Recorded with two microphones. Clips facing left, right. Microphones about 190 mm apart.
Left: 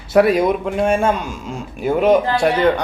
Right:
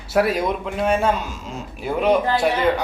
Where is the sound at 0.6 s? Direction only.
45° left (ahead or behind).